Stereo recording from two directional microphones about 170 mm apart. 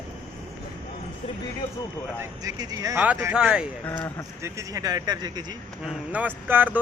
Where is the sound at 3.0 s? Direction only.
10° right (ahead or behind).